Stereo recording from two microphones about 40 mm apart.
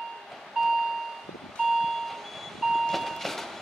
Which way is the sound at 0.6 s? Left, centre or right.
Centre.